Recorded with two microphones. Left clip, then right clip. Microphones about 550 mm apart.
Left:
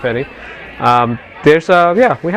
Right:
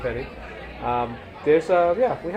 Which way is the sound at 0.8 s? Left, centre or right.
Left.